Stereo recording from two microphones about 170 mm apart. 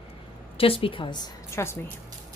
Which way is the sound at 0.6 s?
35° left (ahead or behind).